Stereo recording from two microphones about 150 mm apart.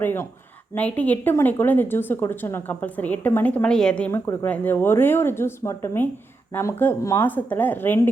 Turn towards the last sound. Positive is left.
turn(degrees=15)  # may be behind; listen again after turning